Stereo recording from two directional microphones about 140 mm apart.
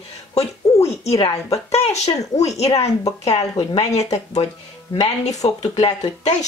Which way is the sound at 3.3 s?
45° left (ahead or behind).